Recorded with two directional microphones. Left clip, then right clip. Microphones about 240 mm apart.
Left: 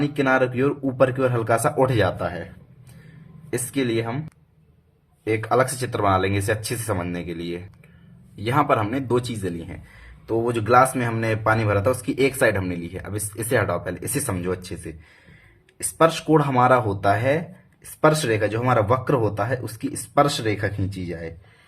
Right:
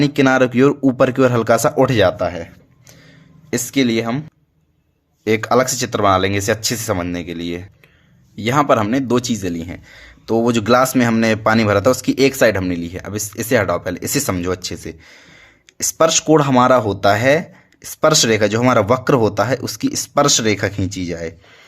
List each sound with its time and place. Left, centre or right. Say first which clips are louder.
0.0 s speech: right 6 dB; right
3.5 s speech: right 6 dB; right
5.2 s speech: right 5 dB; right